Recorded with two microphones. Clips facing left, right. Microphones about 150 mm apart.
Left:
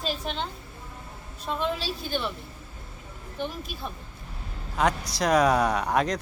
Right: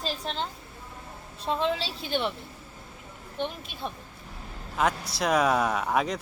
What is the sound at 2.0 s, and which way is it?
Speech, 20° right (ahead or behind).